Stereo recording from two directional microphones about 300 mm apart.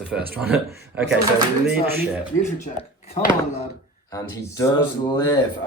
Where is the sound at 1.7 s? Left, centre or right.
Centre.